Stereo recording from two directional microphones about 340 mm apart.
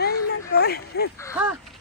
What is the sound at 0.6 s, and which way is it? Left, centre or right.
Speech, left.